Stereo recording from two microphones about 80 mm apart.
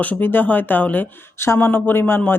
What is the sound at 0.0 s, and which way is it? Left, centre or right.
Speech, left.